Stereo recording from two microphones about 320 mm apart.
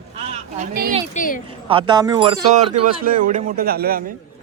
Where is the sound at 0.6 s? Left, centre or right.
Right.